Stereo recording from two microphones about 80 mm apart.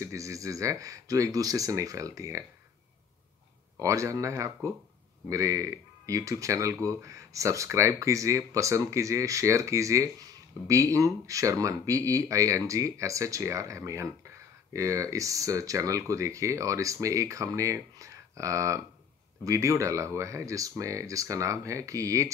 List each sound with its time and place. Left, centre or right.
0.0 s speech: right
3.8 s speech: right